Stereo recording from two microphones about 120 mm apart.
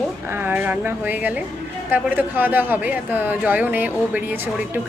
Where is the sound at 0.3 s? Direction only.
15° right (ahead or behind).